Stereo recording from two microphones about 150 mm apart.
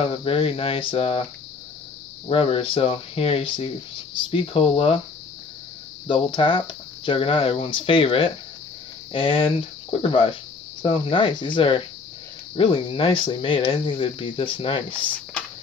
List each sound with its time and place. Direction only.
0.0 s speech: 35° left (ahead or behind)
2.2 s speech: 40° left (ahead or behind)
6.0 s speech: 35° left (ahead or behind)